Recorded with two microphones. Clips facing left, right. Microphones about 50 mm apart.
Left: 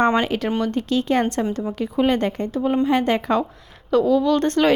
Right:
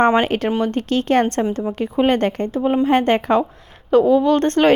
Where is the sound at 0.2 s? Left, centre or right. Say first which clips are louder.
Right 3 dB; right.